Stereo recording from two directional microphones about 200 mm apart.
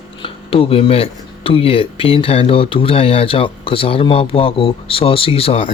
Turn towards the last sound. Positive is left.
turn(degrees=30)  # may be behind; listen again after turning